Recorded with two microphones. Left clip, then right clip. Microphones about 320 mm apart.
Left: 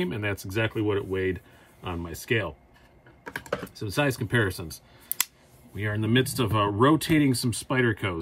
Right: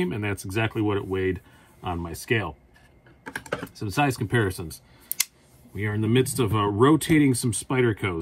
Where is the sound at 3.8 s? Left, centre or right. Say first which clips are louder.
Right 2 dB; centre.